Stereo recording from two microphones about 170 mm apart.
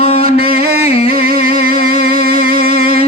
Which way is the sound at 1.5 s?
60° right (ahead or behind).